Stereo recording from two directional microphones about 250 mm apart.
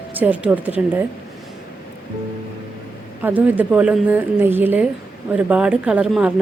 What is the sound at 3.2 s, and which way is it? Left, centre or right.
A woman's voice, centre.